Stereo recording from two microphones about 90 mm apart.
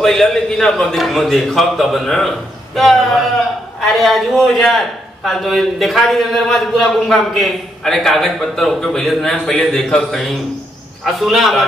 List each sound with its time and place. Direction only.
0.0 s a man's voice: 5° left (ahead or behind)